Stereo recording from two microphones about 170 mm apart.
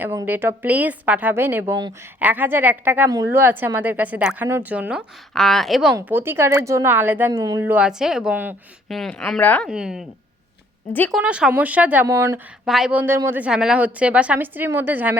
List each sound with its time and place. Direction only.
0.0 s a woman's voice: 10° right (ahead or behind)
5.9 s speech: 10° right (ahead or behind)
8.9 s a woman's voice: centre (ahead or behind)
9.6 s a woman's voice: 5° right (ahead or behind)
11.1 s speech: 5° right (ahead or behind)
12.6 s speech: centre (ahead or behind)